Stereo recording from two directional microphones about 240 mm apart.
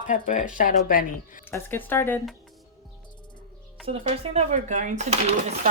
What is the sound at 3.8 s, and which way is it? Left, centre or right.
Speech, right.